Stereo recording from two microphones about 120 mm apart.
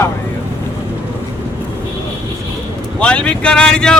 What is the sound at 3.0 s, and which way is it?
Speech, 10° left (ahead or behind).